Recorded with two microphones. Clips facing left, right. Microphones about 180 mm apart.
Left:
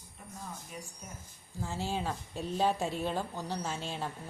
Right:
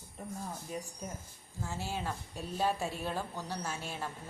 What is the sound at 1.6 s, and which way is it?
A woman's voice, 15° left (ahead or behind).